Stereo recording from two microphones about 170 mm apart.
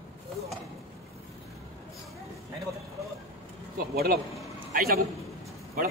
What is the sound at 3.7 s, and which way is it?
Speech, 65° right (ahead or behind).